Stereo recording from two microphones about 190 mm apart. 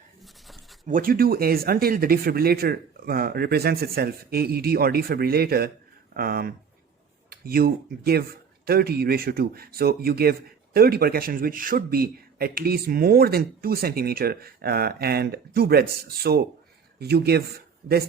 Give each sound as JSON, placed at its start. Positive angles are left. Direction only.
{"t": 0.2, "sound": "writing", "side_deg": 0}
{"t": 0.9, "sound": "speech", "side_deg": -45}